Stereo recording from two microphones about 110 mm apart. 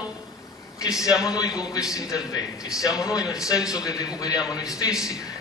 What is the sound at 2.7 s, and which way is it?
Speech, 5° right (ahead or behind).